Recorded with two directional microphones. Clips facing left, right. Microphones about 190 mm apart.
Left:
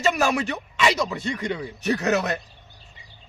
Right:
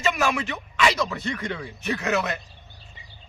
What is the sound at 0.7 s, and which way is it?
Speech, 20° left (ahead or behind).